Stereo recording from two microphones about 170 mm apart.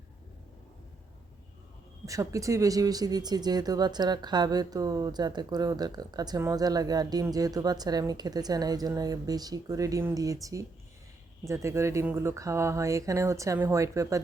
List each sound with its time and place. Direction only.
2.0 s speech: 20° right (ahead or behind)